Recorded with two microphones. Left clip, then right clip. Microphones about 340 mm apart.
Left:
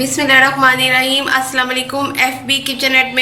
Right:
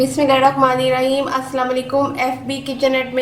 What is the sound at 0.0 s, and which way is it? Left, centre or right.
A woman's voice, centre.